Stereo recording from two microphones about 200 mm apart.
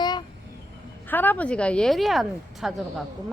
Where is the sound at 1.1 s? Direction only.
10° left (ahead or behind).